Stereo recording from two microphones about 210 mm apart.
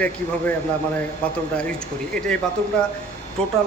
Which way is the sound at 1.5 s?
5° left (ahead or behind).